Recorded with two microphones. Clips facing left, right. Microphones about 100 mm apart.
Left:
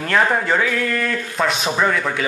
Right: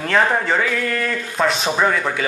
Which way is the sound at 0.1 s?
Centre (ahead or behind).